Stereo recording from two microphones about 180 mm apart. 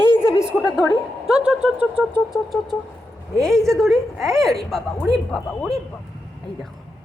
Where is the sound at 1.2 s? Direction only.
5° right (ahead or behind).